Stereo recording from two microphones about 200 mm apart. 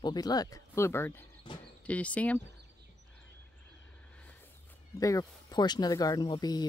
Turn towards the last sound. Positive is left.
turn(degrees=20)  # may be behind; listen again after turning